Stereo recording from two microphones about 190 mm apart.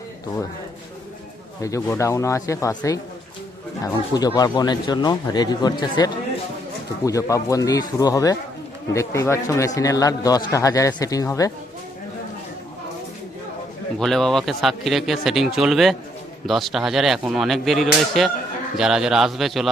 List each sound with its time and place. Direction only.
1.6 s a man's voice: 15° left (ahead or behind)
4.1 s a man's voice: 20° left (ahead or behind)
14.0 s a man's voice: centre (ahead or behind)